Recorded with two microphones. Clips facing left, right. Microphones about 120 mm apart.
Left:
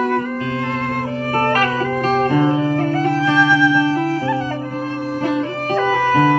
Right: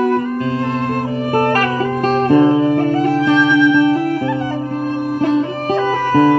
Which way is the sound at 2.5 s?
15° right (ahead or behind).